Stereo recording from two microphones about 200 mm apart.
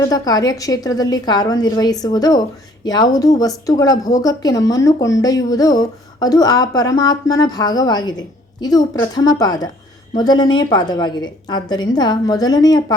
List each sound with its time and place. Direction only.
0.1 s speech: 20° left (ahead or behind)